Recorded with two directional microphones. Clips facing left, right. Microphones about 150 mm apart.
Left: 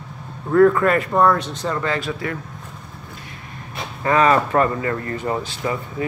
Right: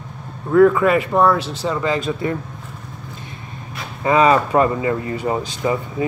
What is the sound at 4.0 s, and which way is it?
Speech, 15° right (ahead or behind).